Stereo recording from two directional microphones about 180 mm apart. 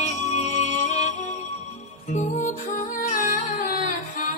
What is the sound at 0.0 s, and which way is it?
Music, 40° left (ahead or behind).